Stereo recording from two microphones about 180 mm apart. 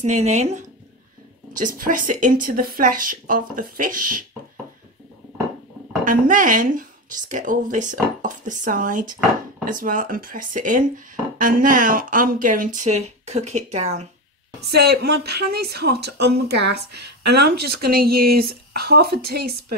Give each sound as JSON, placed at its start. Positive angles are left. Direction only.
{"t": 0.0, "sound": "speech", "side_deg": -40}
{"t": 6.0, "sound": "speech", "side_deg": -45}
{"t": 14.7, "sound": "speech", "side_deg": -65}